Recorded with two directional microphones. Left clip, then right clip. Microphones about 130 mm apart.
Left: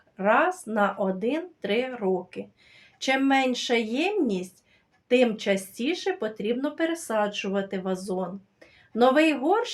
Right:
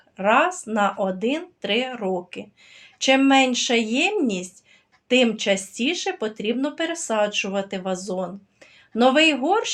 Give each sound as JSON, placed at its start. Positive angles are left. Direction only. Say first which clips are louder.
{"t": 0.2, "sound": "speech", "louder": "right 3 dB", "side_deg": -25}